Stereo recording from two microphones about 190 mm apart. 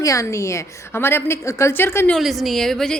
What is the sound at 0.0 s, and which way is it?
A woman's voice, 15° left (ahead or behind).